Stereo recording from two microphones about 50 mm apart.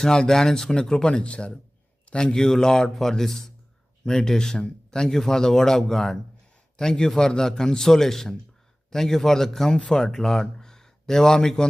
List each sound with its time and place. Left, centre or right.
0.0 s speech: centre